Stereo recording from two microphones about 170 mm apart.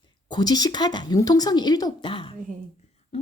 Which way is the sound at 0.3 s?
25° left (ahead or behind).